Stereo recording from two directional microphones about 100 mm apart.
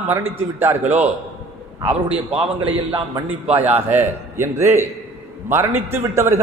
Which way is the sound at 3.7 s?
20° right (ahead or behind).